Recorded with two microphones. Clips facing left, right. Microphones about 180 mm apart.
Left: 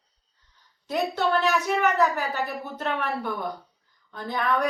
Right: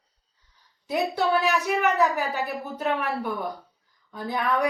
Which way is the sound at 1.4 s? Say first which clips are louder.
Even; 15° right (ahead or behind).